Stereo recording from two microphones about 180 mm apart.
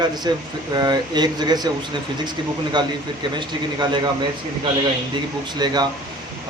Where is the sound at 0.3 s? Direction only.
25° right (ahead or behind).